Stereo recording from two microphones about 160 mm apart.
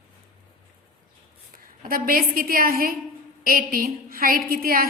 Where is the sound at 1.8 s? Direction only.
65° right (ahead or behind).